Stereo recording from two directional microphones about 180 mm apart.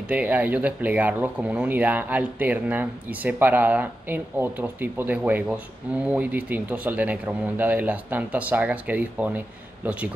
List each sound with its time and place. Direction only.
0.1 s speech: 10° right (ahead or behind)